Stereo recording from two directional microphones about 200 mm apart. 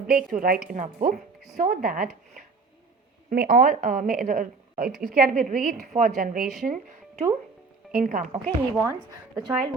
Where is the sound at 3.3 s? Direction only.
50° right (ahead or behind).